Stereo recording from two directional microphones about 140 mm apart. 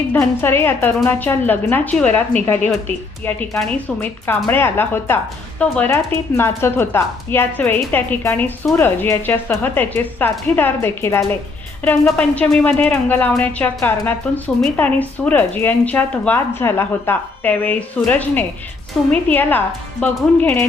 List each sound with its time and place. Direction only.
0.1 s a woman's voice: 15° left (ahead or behind)